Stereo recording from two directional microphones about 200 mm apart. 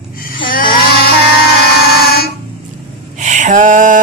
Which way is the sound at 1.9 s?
50° left (ahead or behind).